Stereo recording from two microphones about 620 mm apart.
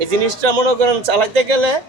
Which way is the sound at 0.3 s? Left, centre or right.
Right.